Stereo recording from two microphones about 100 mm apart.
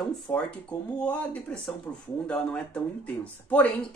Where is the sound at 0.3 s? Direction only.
15° left (ahead or behind).